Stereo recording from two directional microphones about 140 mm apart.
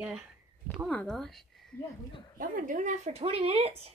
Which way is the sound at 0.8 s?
5° left (ahead or behind).